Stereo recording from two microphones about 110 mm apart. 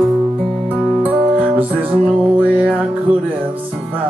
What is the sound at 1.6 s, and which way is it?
Music, 15° right (ahead or behind).